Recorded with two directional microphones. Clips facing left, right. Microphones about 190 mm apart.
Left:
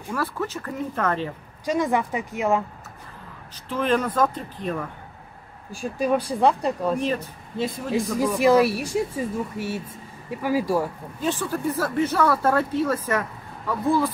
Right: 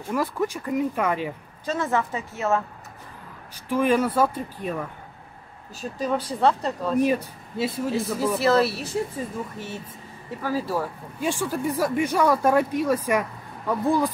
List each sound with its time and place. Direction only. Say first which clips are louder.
0.1 s speech: right 2 dB; 15° right (ahead or behind)
1.7 s speech: left 2 dB; 15° left (ahead or behind)
3.6 s speech: right 2 dB; 10° right (ahead or behind)
5.7 s speech: left 4 dB; 10° left (ahead or behind)
7.0 s speech: right 4 dB; 10° right (ahead or behind)
7.9 s speech: left 1 dB; 15° left (ahead or behind)
11.1 s speech: even; 10° right (ahead or behind)